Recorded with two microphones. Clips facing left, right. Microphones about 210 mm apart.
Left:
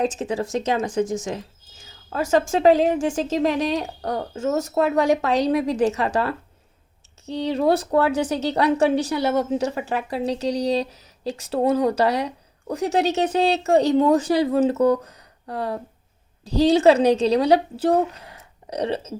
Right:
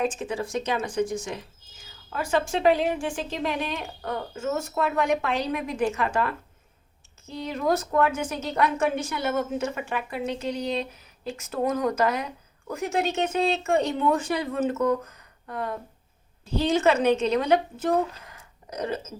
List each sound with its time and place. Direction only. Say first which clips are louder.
0.0 s a woman's voice: left 4 dB; 40° left (ahead or behind)